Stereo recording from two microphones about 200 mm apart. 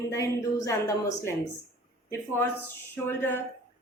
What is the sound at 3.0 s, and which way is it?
Speech, 10° left (ahead or behind).